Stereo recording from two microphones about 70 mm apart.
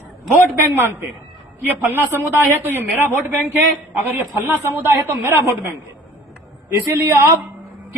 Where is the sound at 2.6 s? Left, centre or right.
Right.